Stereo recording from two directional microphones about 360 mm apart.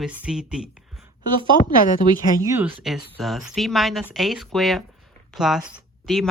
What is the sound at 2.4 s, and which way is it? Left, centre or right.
Speech, centre.